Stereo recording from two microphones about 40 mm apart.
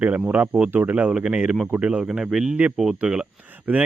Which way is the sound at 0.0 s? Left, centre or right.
Right.